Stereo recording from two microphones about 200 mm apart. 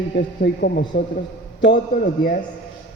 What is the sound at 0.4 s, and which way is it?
Speech, 55° left (ahead or behind).